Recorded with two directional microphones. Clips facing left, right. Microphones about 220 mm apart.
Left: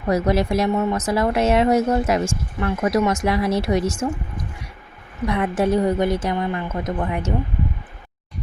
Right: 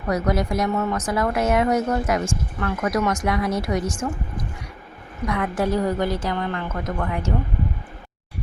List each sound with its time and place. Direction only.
0.1 s a woman's voice: 25° left (ahead or behind)
5.3 s a woman's voice: 20° left (ahead or behind)